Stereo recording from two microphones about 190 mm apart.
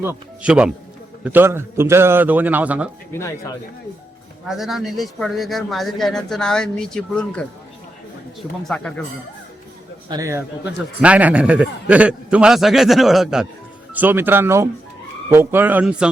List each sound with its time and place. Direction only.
0.0 s a man's voice: 10° right (ahead or behind)
3.1 s speech: 15° left (ahead or behind)
4.4 s speech: centre (ahead or behind)
8.6 s speech: 5° left (ahead or behind)
10.1 s a man's voice: 15° right (ahead or behind)